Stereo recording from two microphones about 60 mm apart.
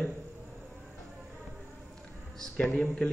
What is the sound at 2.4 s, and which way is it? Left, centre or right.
Speech, centre.